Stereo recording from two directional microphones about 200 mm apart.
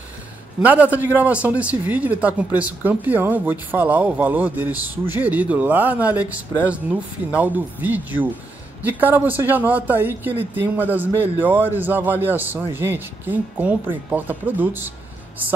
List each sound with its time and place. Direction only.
0.6 s a man's voice: 5° right (ahead or behind)